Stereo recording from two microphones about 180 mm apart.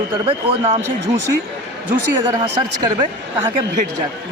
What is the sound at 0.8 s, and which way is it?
Speech, 15° right (ahead or behind).